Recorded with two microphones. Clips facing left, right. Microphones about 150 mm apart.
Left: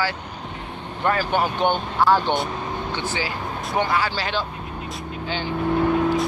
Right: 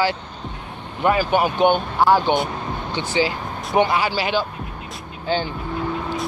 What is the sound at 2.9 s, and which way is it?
Speech, 15° right (ahead or behind).